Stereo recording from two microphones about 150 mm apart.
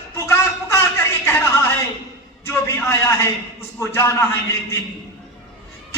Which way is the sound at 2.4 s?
15° left (ahead or behind).